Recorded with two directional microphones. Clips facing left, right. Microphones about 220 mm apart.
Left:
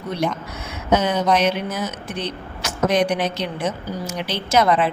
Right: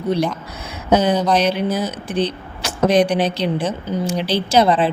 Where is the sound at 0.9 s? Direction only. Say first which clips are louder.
Right 3 dB; 35° right (ahead or behind).